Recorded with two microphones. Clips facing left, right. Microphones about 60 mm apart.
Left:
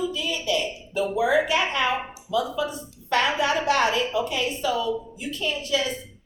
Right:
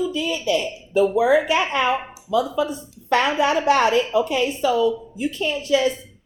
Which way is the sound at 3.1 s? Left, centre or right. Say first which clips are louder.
Right 4 dB; right.